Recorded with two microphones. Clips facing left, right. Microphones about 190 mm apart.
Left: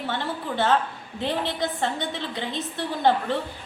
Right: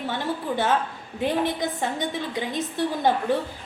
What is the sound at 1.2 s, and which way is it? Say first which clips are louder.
A woman's voice: right 3 dB; 15° right (ahead or behind).